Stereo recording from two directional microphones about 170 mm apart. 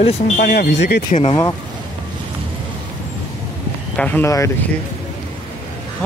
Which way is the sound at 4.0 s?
10° left (ahead or behind).